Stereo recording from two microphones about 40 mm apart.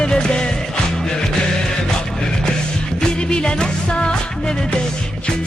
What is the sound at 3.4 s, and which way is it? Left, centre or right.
Music, left.